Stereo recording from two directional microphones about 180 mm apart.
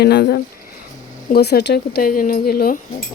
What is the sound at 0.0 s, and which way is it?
Speech, 65° left (ahead or behind).